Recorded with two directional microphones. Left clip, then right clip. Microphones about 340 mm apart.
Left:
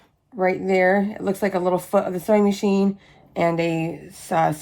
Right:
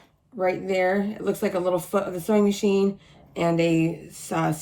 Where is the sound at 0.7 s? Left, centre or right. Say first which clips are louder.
Left 5 dB; left.